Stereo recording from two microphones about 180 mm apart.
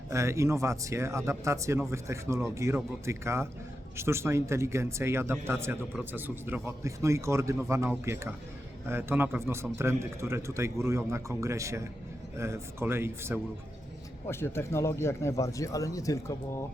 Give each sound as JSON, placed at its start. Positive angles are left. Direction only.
{"t": 0.1, "sound": "speech", "side_deg": -15}
{"t": 14.3, "sound": "speech", "side_deg": 15}